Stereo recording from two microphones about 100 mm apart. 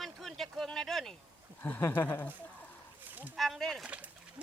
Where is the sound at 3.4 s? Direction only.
Centre (ahead or behind).